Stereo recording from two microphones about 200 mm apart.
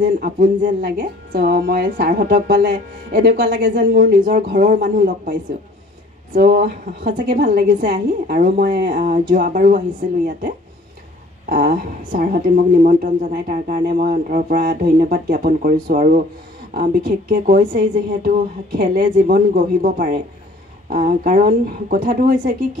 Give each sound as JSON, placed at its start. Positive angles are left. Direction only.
{"t": 0.0, "sound": "a woman's voice", "side_deg": -45}